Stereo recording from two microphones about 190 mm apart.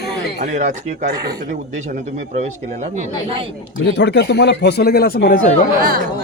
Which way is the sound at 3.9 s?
65° left (ahead or behind).